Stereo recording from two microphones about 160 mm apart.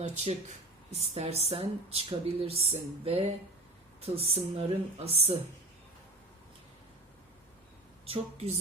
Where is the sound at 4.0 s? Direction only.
40° right (ahead or behind).